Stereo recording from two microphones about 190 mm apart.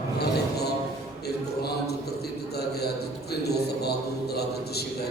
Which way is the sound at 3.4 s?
55° left (ahead or behind).